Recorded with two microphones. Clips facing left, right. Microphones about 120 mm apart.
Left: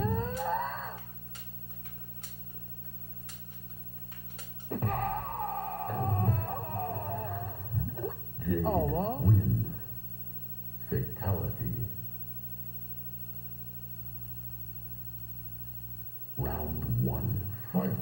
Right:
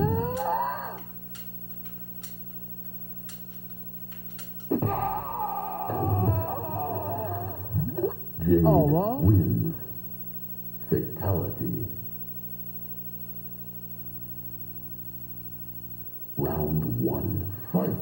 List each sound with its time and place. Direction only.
0.0 s a sound: 20° right (ahead or behind)
4.8 s music: 15° right (ahead or behind); by 8.5 s 35° right (ahead or behind)
8.5 s speech: 25° right (ahead or behind)
9.2 s speech: 30° right (ahead or behind)
11.2 s a man's voice: 30° right (ahead or behind)
16.3 s a sound: 30° right (ahead or behind)